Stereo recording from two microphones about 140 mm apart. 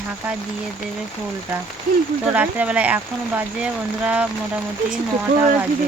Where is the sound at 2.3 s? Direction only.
10° right (ahead or behind).